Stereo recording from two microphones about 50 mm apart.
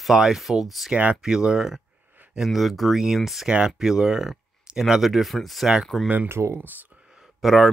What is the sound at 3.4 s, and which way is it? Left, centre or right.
Speech, centre.